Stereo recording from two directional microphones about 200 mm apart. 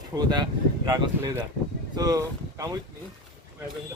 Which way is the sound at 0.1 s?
20° right (ahead or behind).